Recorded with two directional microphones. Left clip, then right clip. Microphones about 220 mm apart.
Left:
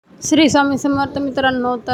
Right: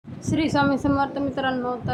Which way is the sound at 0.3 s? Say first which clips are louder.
Left 8 dB; 35° left (ahead or behind).